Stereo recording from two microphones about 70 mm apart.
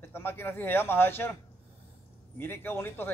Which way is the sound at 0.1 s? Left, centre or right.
Left.